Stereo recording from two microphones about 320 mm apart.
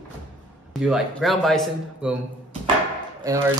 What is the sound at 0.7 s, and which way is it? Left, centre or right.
A man's voice, centre.